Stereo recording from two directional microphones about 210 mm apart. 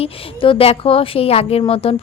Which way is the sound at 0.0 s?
25° left (ahead or behind).